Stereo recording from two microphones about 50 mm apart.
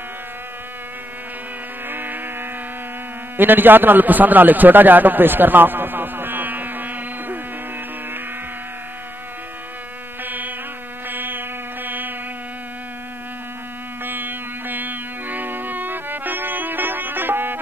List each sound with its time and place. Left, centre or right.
1.9 s a sound: right
3.3 s a man's voice: right
10.2 s insect: right
11.1 s music: right
14.0 s music: right